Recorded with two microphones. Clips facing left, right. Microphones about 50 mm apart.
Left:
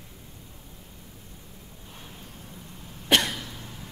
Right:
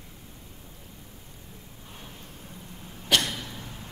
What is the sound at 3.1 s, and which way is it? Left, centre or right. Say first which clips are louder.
Cough: left 2 dB; left.